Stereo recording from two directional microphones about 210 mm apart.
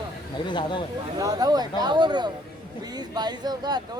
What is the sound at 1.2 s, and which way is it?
Speech, 20° right (ahead or behind).